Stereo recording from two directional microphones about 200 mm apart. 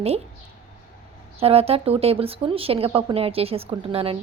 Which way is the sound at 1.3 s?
30° right (ahead or behind).